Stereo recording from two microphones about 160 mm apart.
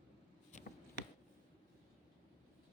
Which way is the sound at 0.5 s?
50° left (ahead or behind).